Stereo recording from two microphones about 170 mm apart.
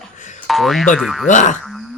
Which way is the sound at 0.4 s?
Centre (ahead or behind).